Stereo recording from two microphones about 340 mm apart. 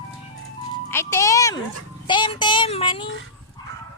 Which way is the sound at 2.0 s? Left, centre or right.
Centre.